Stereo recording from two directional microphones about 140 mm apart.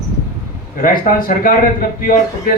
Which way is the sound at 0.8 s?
90° left.